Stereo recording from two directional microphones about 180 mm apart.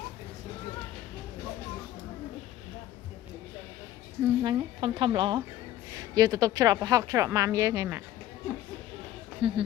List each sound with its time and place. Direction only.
4.4 s speech: 25° right (ahead or behind)
9.4 s speech: 30° right (ahead or behind)